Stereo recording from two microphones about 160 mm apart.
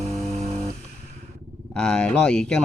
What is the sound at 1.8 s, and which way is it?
Speech, 5° left (ahead or behind).